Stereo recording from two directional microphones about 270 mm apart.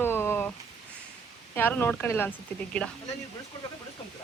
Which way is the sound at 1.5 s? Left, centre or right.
Centre.